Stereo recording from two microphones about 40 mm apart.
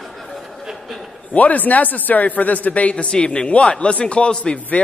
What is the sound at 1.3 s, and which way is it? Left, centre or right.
A man's voice, left.